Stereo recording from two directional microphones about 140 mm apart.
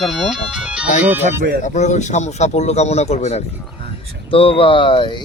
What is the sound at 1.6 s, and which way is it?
Speech, 55° left (ahead or behind).